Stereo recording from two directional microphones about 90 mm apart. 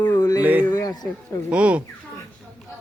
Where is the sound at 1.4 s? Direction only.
15° right (ahead or behind).